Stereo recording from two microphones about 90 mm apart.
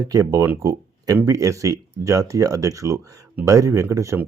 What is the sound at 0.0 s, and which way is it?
Speech, 40° right (ahead or behind).